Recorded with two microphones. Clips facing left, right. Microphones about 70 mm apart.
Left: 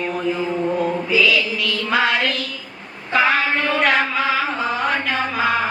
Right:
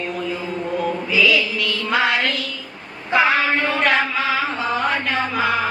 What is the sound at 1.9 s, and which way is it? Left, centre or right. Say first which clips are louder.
Music: left 1 dB; centre.